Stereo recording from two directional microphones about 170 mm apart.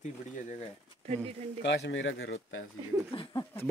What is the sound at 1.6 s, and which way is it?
Speech, 90° left.